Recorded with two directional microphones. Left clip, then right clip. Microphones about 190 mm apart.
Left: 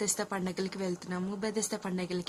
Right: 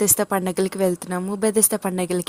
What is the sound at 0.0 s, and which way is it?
A woman's voice, 35° right (ahead or behind).